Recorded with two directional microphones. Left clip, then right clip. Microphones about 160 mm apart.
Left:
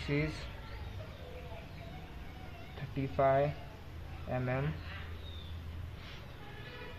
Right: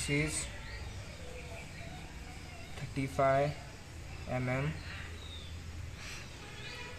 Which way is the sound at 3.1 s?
Centre (ahead or behind).